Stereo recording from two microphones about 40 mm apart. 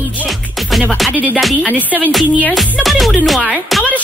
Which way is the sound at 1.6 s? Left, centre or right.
Right.